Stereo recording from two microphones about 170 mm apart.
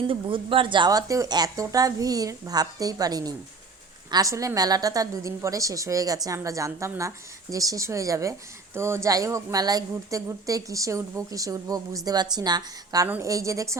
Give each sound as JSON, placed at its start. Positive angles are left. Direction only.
{"t": 0.1, "sound": "a woman's voice", "side_deg": -30}